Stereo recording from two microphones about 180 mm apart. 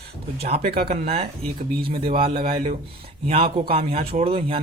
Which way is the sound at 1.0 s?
35° right (ahead or behind).